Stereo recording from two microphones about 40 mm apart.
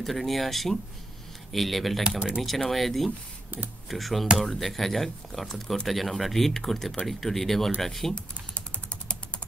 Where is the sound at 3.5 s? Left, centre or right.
Right.